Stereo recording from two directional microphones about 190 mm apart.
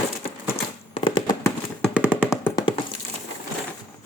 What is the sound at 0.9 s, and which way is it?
Fireworks, 25° left (ahead or behind).